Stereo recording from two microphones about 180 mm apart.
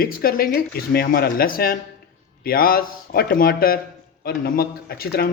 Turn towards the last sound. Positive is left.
turn(degrees=60)  # may be behind; listen again after turning